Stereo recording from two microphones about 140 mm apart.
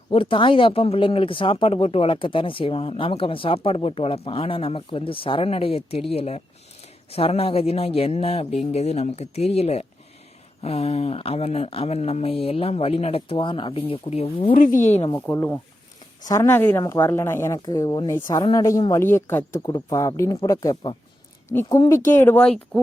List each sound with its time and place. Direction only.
0.1 s speech: 40° left (ahead or behind)
14.5 s speech: 75° left (ahead or behind); by 15.1 s 55° left (ahead or behind)
15.3 s speech: 15° left (ahead or behind)
21.5 s speech: 15° left (ahead or behind)